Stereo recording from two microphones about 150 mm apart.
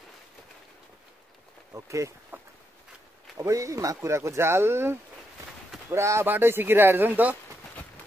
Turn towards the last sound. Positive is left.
turn(degrees=-10)  # may be behind; listen again after turning